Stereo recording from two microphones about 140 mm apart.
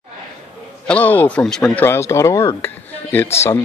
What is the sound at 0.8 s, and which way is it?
Speech, 10° left (ahead or behind).